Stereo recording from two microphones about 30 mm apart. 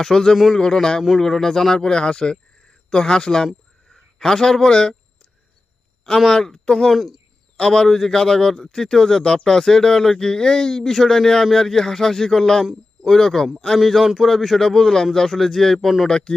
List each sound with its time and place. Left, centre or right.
0.0 s a man's voice: centre
6.2 s speech: centre
6.9 s speech: centre
7.5 s a man's voice: left
7.9 s speech: centre
13.7 s speech: centre
14.6 s speech: centre
16.0 s speech: left